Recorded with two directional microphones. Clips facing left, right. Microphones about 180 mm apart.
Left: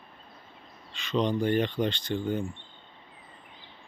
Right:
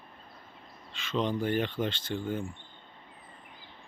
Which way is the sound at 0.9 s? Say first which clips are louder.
Left 3 dB; 5° right (ahead or behind).